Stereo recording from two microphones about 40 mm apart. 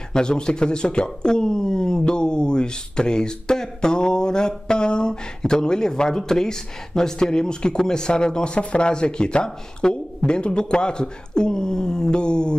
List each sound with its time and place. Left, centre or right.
0.1 s speech: centre